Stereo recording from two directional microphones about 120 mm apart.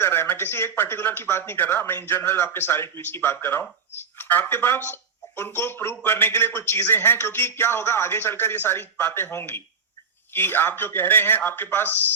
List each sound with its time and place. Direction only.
0.0 s a man's voice: 20° left (ahead or behind)